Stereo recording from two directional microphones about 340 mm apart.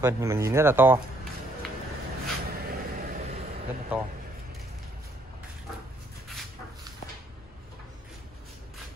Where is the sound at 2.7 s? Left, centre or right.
Right.